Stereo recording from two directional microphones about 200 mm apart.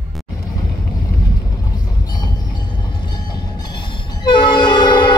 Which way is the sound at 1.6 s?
20° left (ahead or behind).